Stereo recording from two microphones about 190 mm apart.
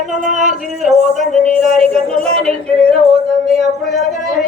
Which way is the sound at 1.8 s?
35° right (ahead or behind).